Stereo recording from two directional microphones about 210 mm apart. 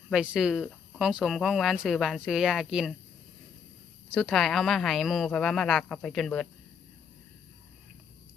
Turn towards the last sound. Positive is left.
turn(degrees=0)  # may be behind; listen again after turning